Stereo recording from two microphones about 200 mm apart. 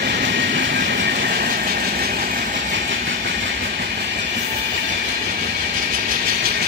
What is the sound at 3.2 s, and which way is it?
Train, 60° right (ahead or behind).